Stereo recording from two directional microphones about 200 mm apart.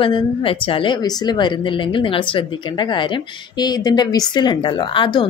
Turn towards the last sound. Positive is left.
turn(degrees=25)  # may be behind; listen again after turning